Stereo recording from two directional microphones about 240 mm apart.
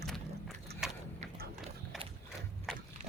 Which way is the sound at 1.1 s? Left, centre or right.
Right.